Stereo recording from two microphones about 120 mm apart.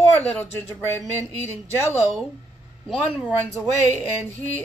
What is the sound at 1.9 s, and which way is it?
Speech, 20° right (ahead or behind).